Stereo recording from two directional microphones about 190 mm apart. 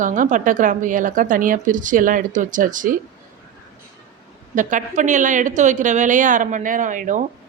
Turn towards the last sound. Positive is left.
turn(degrees=-40)  # may be behind; listen again after turning